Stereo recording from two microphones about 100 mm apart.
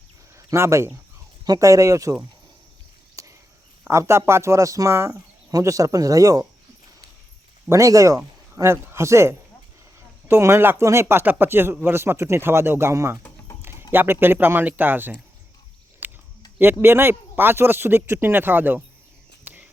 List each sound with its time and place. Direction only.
0.3 s speech: 25° right (ahead or behind)
3.2 s a sound: 35° right (ahead or behind)
3.8 s speech: 30° right (ahead or behind)
7.7 s speech: 35° right (ahead or behind)
13.6 s a sound: 25° right (ahead or behind)
13.9 s speech: 20° right (ahead or behind)
16.0 s a sound: 20° right (ahead or behind)
16.8 s speech: 25° right (ahead or behind)
19.5 s cricket: 15° right (ahead or behind)